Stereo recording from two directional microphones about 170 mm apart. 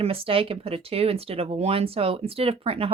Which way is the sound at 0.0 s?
35° right (ahead or behind).